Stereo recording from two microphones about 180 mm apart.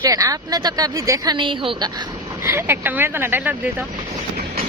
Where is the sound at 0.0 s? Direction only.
20° right (ahead or behind).